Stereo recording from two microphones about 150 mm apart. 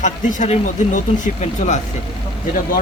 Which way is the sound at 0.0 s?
55° left (ahead or behind).